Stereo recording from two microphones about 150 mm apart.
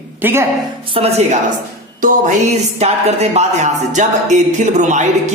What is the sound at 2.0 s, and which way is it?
Music, 55° right (ahead or behind).